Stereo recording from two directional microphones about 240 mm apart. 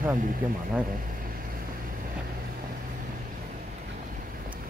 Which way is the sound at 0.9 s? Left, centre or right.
Right.